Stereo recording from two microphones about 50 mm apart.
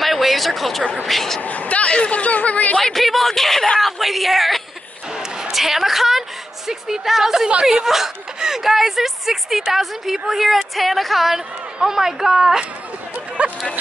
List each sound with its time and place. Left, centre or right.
0.0 s a sound: centre
1.0 s speech: centre
1.4 s speech: left
2.8 s speech: centre
3.8 s a woman's voice: centre
13.4 s speech: right